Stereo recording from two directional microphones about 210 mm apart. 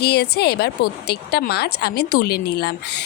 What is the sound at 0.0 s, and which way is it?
Speech, 50° left (ahead or behind).